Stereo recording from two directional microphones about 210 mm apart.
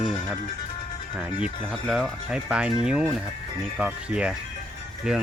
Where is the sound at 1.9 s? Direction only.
5° right (ahead or behind).